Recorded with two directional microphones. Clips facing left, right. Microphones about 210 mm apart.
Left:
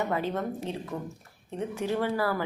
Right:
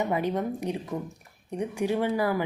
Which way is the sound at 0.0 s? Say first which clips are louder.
Right 2 dB; 15° right (ahead or behind).